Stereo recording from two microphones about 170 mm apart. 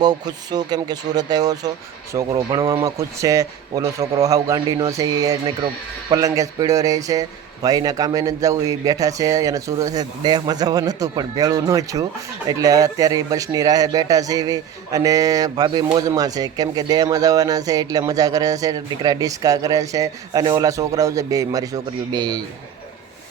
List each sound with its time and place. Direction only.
0.0 s speech: 25° right (ahead or behind)